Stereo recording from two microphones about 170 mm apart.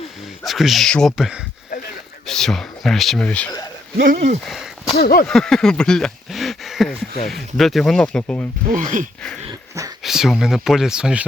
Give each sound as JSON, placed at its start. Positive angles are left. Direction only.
{"t": 0.4, "sound": "speech", "side_deg": 0}
{"t": 4.0, "sound": "speech", "side_deg": -45}
{"t": 4.4, "sound": "speech", "side_deg": 0}
{"t": 4.9, "sound": "speech", "side_deg": 65}
{"t": 5.3, "sound": "speech", "side_deg": 5}
{"t": 8.7, "sound": "speech", "side_deg": -50}
{"t": 9.5, "sound": "dog", "side_deg": -20}
{"t": 10.0, "sound": "speech", "side_deg": 0}